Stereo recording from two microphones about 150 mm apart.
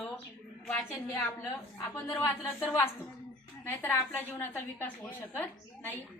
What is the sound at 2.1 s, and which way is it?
A woman's voice, 20° left (ahead or behind).